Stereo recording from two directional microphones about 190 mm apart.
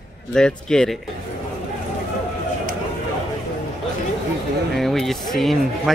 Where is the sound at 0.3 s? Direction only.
5° left (ahead or behind).